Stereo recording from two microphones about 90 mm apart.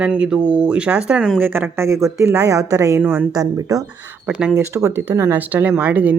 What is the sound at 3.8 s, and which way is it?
A woman's voice, 20° right (ahead or behind).